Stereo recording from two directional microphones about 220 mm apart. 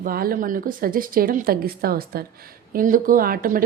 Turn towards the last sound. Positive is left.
turn(degrees=-40)  # may be behind; listen again after turning